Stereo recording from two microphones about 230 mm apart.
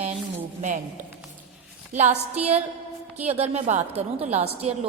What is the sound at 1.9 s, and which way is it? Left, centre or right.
A woman's voice, right.